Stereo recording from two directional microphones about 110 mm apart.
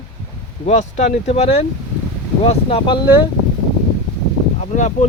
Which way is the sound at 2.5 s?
55° left (ahead or behind).